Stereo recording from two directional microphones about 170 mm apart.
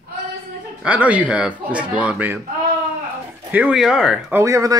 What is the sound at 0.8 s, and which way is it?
Speech, 10° right (ahead or behind).